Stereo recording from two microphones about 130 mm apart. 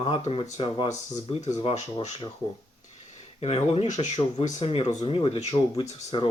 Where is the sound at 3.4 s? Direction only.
50° left (ahead or behind).